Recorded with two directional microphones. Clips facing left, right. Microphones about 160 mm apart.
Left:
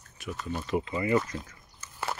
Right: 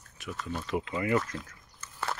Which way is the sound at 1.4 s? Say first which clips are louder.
Even; centre (ahead or behind).